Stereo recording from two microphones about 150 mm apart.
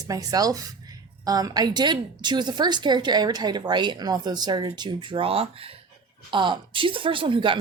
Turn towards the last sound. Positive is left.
turn(degrees=-35)  # may be behind; listen again after turning